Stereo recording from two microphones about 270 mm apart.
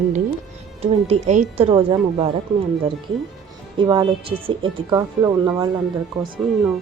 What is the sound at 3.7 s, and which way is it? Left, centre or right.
Speech, centre.